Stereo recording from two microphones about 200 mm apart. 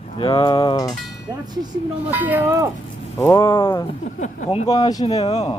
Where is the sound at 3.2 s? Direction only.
15° left (ahead or behind).